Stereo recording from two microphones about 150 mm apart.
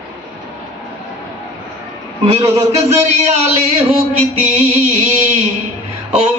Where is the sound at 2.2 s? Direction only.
45° right (ahead or behind).